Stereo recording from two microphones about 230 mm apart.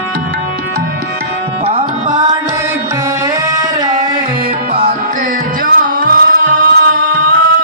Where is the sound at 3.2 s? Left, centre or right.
Centre.